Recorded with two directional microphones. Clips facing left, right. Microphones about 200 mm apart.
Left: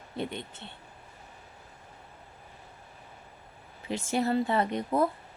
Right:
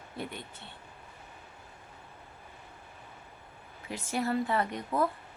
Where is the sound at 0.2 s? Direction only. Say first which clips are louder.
Left 5 dB; 25° left (ahead or behind).